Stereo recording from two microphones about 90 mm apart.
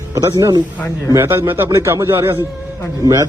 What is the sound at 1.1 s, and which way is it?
Speech, 25° right (ahead or behind).